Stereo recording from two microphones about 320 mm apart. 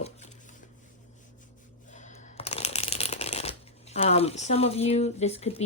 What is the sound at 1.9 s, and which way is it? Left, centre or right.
Shuffling cards, left.